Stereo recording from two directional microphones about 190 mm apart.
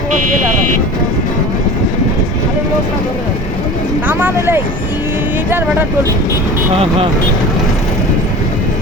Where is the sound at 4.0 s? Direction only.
10° right (ahead or behind).